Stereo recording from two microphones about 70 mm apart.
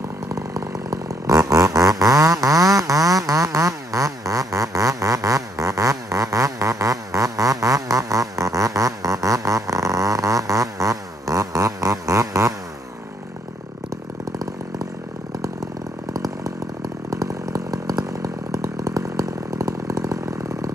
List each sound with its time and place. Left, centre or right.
0.3 s chainsaw: right
16.1 s chainsaw: right